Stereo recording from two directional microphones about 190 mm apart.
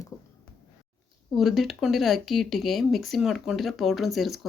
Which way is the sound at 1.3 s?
Centre (ahead or behind).